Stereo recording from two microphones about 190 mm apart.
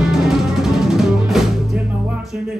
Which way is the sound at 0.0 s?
5° right (ahead or behind).